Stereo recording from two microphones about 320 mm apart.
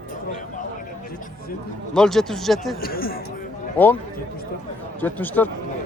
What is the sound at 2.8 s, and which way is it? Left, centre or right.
Speech, left.